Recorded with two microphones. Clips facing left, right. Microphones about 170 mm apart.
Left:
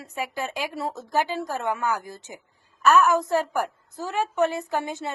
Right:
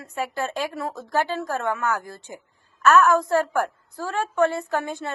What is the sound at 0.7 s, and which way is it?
A woman's voice, 25° left (ahead or behind).